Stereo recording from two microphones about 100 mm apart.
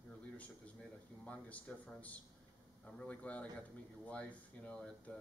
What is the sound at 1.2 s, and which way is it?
Speech, 10° left (ahead or behind).